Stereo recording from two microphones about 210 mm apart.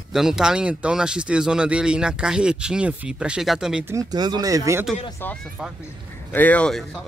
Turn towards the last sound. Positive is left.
turn(degrees=5)  # may be behind; listen again after turning